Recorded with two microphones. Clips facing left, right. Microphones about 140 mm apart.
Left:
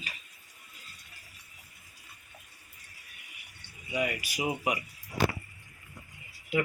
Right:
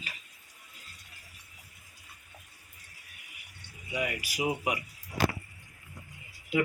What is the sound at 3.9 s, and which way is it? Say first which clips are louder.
Speech: left 1 dB; 5° right (ahead or behind).